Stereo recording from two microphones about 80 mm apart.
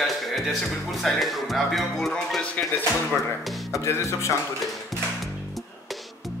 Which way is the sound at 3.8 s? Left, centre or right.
Left.